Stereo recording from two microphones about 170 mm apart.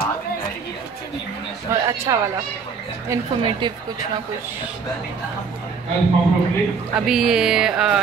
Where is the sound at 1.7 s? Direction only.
20° right (ahead or behind).